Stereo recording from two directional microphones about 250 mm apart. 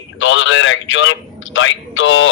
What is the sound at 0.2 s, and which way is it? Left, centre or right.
A man's voice, left.